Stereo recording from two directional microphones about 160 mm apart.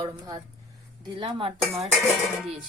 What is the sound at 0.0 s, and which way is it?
A woman's voice, 30° right (ahead or behind).